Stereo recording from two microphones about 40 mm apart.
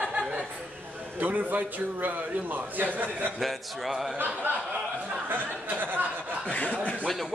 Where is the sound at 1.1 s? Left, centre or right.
Right.